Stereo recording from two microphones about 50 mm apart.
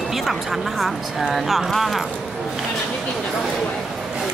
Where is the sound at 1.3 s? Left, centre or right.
Centre.